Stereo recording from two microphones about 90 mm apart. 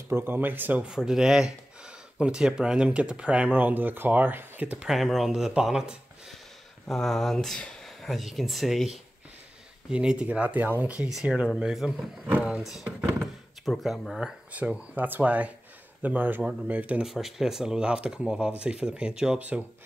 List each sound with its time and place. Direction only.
0.1 s speech: 25° right (ahead or behind)
0.8 s speech: 5° right (ahead or behind)
4.8 s speech: centre (ahead or behind)
6.9 s speech: 5° left (ahead or behind); by 12.6 s 15° right (ahead or behind)
13.7 s speech: centre (ahead or behind)
14.2 s speech: 15° right (ahead or behind)
17.0 s speech: 5° right (ahead or behind)